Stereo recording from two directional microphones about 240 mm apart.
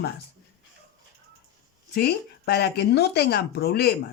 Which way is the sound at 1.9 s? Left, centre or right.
Left.